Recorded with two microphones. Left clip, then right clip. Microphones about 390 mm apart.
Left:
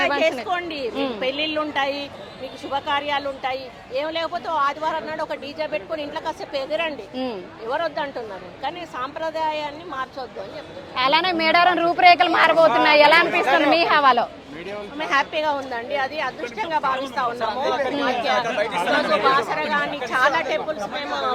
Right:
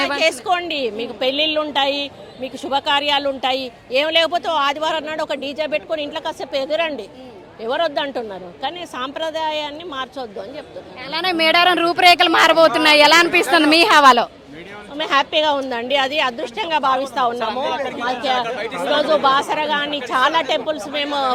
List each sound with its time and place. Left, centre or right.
0.2 s speech: right
2.6 s speech: right
11.2 s speech: centre
14.9 s speech: right
18.1 s speech: right
18.4 s speech: right
18.9 s speech: right